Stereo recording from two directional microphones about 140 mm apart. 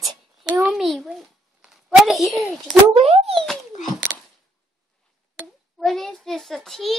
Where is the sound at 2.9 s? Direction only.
45° right (ahead or behind).